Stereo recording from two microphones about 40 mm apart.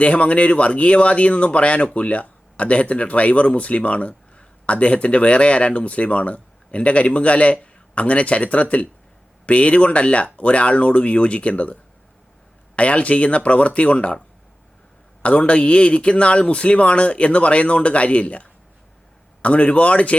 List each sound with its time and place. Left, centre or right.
0.0 s speech: left
15.2 s speech: left